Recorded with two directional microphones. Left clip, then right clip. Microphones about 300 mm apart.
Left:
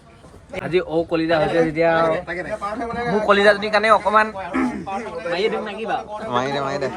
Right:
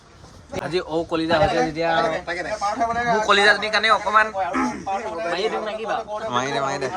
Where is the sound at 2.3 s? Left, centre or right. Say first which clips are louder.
Right 1 dB; right.